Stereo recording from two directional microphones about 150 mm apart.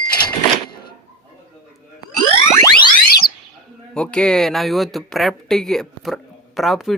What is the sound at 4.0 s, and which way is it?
Speech, 5° left (ahead or behind).